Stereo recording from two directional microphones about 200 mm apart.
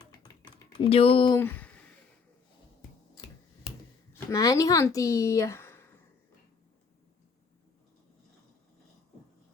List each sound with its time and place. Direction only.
0.0 s typing: 20° left (ahead or behind)
1.4 s speech: 10° left (ahead or behind)
4.3 s speech: 15° left (ahead or behind)